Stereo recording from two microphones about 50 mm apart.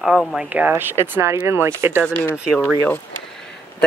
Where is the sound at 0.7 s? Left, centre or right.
Right.